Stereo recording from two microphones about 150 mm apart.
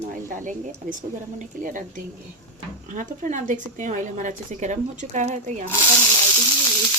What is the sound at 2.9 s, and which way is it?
A woman's voice, 60° right (ahead or behind).